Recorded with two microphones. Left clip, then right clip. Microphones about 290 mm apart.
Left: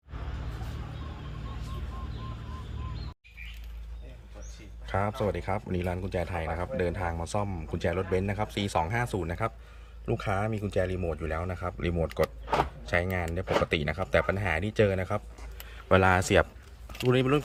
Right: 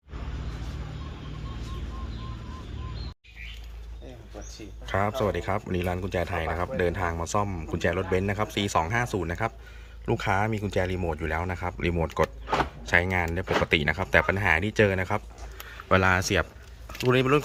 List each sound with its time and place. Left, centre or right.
4.9 s speech: centre